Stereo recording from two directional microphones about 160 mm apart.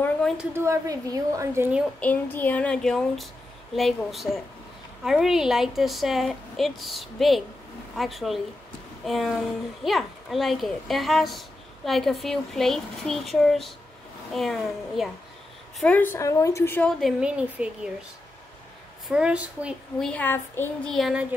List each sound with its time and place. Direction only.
0.4 s a woman's voice: 15° right (ahead or behind)
2.0 s a woman's voice: 10° left (ahead or behind)
15.8 s a woman's voice: 10° left (ahead or behind)
17.0 s a woman's voice: 5° right (ahead or behind)
19.0 s a woman's voice: 5° right (ahead or behind)
20.0 s a woman's voice: 10° left (ahead or behind)
20.9 s a child's voice: 5° right (ahead or behind)